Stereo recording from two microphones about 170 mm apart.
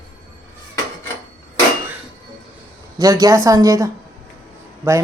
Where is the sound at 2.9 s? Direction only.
20° right (ahead or behind).